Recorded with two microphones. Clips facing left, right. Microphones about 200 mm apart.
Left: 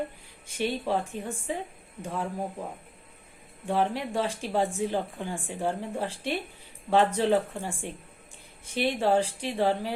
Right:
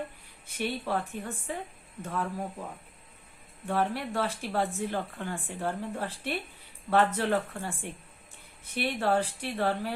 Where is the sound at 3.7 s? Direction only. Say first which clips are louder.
Left 2 dB; 15° left (ahead or behind).